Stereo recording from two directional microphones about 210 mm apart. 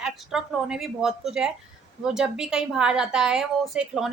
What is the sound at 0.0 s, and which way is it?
A woman's voice, 5° right (ahead or behind).